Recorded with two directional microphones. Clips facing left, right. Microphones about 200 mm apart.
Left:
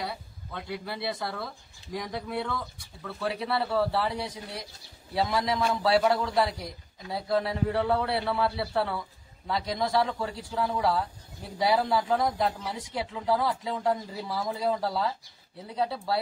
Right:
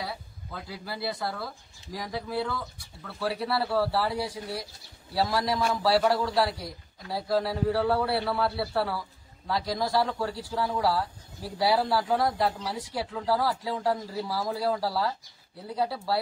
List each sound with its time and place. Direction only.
0.0 s speech: centre (ahead or behind)